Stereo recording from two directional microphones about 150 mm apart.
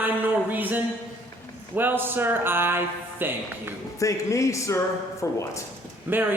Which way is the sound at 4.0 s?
20° left (ahead or behind).